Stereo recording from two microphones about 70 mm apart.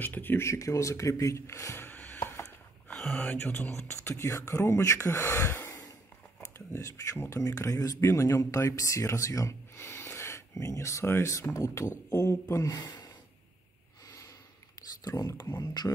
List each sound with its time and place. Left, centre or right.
0.0 s speech: left
0.4 s speech: left
1.9 s music: left
2.9 s a sound: centre
3.3 s speech: left
4.1 s speech: left
7.2 s speech: left
9.8 s speech: left
14.0 s a sound: left
15.0 s speech: left